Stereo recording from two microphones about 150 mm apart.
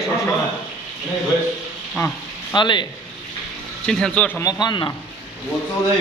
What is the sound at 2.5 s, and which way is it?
Speech, 30° left (ahead or behind).